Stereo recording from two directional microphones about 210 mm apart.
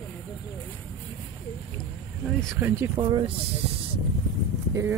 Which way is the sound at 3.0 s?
20° right (ahead or behind).